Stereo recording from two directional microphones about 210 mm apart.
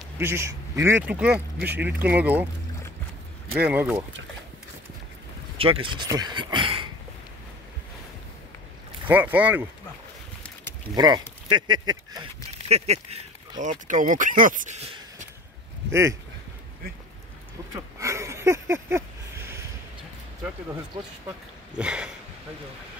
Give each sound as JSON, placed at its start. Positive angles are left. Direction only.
{"t": 0.2, "sound": "speech", "side_deg": -10}
{"t": 3.5, "sound": "speech", "side_deg": -10}
{"t": 5.6, "sound": "speech", "side_deg": -25}
{"t": 9.0, "sound": "speech", "side_deg": -10}
{"t": 10.4, "sound": "a sound", "side_deg": 5}
{"t": 11.0, "sound": "speech", "side_deg": -20}
{"t": 12.6, "sound": "speech", "side_deg": -30}
{"t": 15.9, "sound": "speech", "side_deg": -15}
{"t": 17.7, "sound": "speech", "side_deg": -15}
{"t": 21.7, "sound": "a sound", "side_deg": -5}